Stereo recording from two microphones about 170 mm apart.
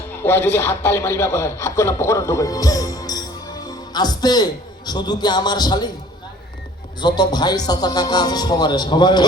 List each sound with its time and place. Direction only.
0.2 s speech: 15° left (ahead or behind)
3.7 s music: 25° left (ahead or behind)
4.9 s a man's voice: 25° left (ahead or behind)
7.0 s a man's voice: 25° left (ahead or behind)